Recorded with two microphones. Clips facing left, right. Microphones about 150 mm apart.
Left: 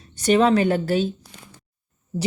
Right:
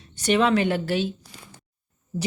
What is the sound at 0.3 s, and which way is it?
Speech, 40° left (ahead or behind).